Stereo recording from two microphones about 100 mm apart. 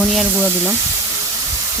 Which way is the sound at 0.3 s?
15° right (ahead or behind).